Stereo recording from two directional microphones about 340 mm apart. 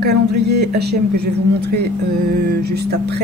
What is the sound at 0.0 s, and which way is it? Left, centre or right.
Speech, right.